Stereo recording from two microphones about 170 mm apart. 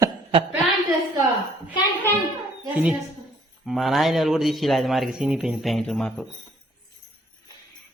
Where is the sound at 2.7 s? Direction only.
5° right (ahead or behind).